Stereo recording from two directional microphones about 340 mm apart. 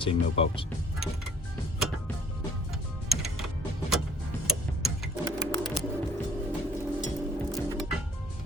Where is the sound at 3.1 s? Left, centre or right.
Centre.